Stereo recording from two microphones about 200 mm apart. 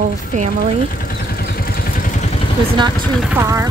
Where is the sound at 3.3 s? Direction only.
15° right (ahead or behind).